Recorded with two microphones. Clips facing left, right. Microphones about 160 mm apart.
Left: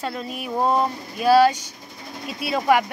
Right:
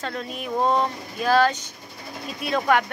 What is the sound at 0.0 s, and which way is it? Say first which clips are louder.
Speech: left 1 dB; 10° left (ahead or behind).